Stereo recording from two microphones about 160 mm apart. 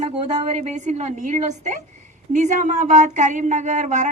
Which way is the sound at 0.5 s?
45° right (ahead or behind).